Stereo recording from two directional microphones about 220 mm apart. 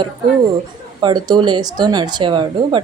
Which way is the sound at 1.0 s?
20° right (ahead or behind).